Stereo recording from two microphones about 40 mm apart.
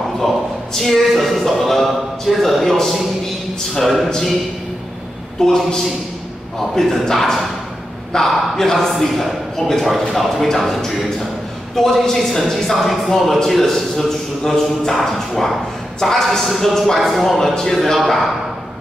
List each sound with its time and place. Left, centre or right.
0.7 s a man's voice: centre
5.4 s a man's voice: centre